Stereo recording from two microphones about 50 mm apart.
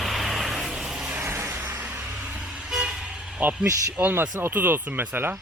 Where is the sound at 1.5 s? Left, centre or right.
Right.